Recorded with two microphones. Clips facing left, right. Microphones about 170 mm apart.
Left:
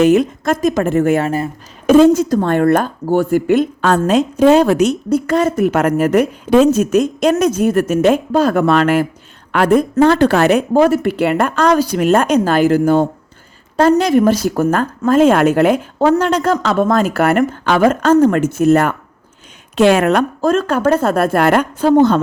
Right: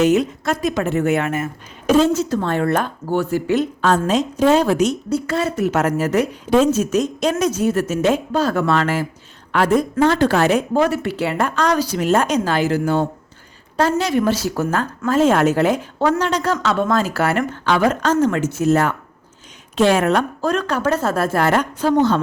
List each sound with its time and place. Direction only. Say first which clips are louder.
0.0 s a woman's voice: left 4 dB; 55° left (ahead or behind); by 1.5 s 35° left (ahead or behind)
1.9 s a woman's voice: left 6 dB; 55° left (ahead or behind)
10.8 s a woman's voice: left 6 dB; 45° left (ahead or behind); by 20.2 s 65° left (ahead or behind)
20.4 s a woman's voice: left 5 dB; 45° left (ahead or behind)